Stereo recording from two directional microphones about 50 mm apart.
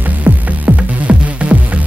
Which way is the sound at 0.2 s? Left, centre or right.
Right.